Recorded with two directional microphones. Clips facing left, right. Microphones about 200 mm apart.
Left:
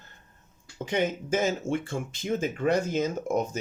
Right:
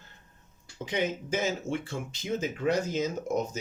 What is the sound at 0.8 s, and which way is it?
Speech, 50° left (ahead or behind).